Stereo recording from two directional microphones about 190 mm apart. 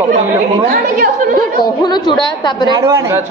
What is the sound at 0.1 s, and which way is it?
A woman's voice, 45° right (ahead or behind).